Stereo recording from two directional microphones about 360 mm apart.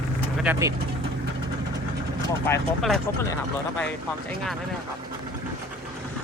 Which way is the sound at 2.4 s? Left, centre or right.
Centre.